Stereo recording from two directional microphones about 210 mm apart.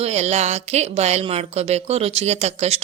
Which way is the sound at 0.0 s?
30° right (ahead or behind).